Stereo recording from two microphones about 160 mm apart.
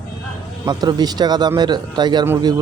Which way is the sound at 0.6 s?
25° right (ahead or behind).